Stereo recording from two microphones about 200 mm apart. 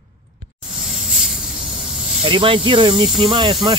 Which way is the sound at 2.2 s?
25° right (ahead or behind).